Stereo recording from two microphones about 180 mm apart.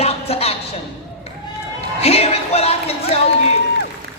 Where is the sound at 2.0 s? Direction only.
35° left (ahead or behind).